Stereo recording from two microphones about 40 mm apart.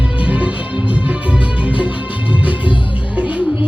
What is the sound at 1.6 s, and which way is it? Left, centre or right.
Music, right.